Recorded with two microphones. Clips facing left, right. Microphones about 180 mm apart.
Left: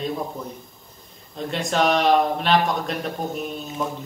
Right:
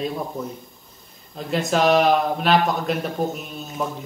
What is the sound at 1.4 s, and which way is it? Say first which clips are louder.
Speech: right 2 dB; centre (ahead or behind).